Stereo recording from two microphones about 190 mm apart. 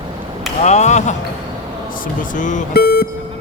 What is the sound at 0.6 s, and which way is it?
Speech, 35° left (ahead or behind).